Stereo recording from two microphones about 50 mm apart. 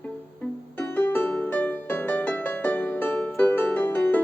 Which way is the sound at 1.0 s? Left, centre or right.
Left.